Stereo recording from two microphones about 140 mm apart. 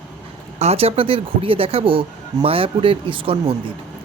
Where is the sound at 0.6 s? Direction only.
45° right (ahead or behind).